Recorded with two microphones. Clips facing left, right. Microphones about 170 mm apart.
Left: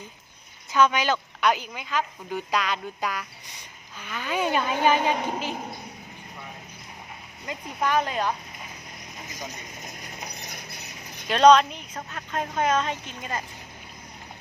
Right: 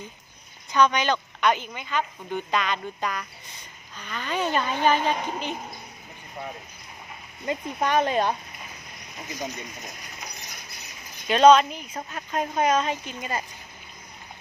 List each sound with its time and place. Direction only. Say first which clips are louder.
0.7 s a woman's voice: even; 5° left (ahead or behind)
7.4 s speech: right 2 dB; 25° right (ahead or behind)
11.3 s a woman's voice: right 1 dB; 5° right (ahead or behind)